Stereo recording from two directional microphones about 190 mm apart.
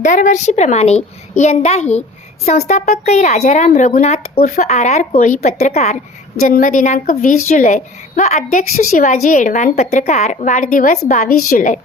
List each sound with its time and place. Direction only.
0.0 s a woman's voice: 40° left (ahead or behind)